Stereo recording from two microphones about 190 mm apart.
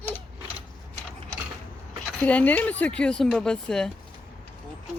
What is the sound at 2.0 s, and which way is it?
Speech, 10° left (ahead or behind).